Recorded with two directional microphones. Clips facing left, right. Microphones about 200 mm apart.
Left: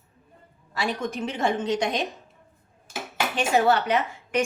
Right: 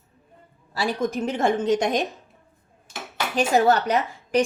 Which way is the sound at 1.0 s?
40° right (ahead or behind).